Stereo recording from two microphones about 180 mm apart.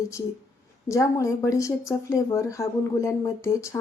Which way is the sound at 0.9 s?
15° left (ahead or behind).